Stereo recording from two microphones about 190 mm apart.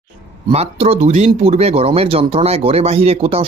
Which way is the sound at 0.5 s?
35° right (ahead or behind).